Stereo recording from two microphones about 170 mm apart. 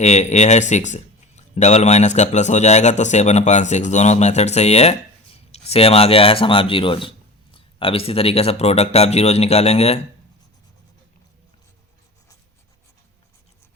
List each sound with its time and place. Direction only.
0.0 s a man's voice: 40° left (ahead or behind)